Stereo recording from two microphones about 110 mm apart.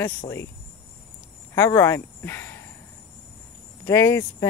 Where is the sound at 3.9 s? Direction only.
25° left (ahead or behind).